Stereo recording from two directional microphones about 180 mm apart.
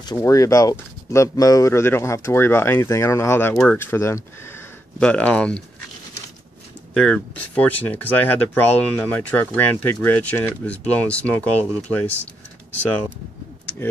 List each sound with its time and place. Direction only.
0.0 s speech: 20° left (ahead or behind)
6.9 s speech: 5° left (ahead or behind)